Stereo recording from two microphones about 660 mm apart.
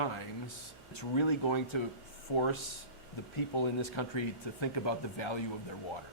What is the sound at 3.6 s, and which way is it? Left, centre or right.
A man's voice, left.